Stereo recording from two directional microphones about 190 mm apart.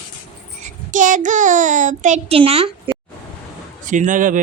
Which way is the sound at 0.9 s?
40° right (ahead or behind).